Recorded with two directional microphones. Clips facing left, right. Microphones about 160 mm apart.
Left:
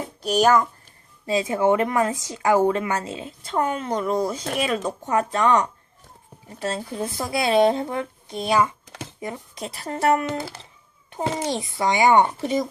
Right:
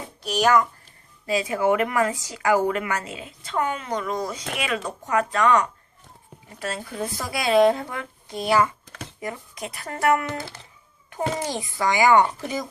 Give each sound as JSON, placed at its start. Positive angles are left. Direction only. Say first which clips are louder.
{"t": 0.3, "sound": "a child's voice", "louder": "left 2 dB", "side_deg": 35}
{"t": 1.3, "sound": "a child's voice", "louder": "left 2 dB", "side_deg": 25}
{"t": 4.8, "sound": "speech", "louder": "left 1 dB", "side_deg": 25}